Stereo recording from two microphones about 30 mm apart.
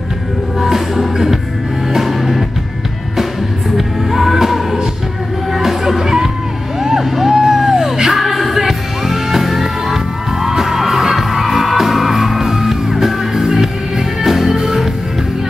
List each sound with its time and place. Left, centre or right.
0.6 s music: centre
3.7 s music: centre
6.0 s music: centre